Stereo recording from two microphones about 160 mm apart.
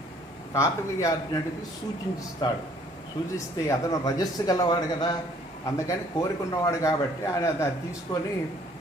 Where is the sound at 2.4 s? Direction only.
25° left (ahead or behind).